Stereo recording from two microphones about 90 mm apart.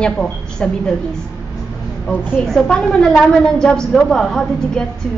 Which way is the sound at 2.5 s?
10° left (ahead or behind).